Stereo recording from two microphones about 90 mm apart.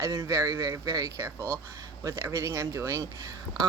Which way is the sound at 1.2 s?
30° right (ahead or behind).